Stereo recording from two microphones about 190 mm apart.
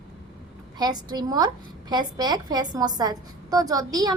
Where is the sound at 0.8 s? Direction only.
20° right (ahead or behind).